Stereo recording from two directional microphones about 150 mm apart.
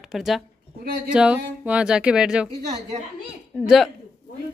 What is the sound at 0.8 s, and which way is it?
Speech, 70° right (ahead or behind).